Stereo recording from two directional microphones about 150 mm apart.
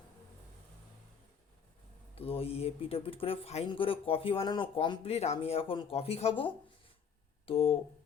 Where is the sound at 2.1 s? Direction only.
40° left (ahead or behind).